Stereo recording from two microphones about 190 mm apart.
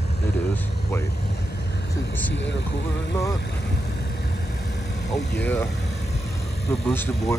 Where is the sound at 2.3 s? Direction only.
70° left (ahead or behind).